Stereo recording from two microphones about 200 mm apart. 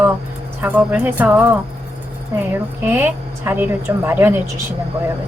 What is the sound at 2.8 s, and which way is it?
A woman's voice, 10° right (ahead or behind).